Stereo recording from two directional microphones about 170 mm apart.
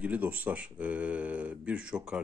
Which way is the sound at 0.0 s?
10° right (ahead or behind).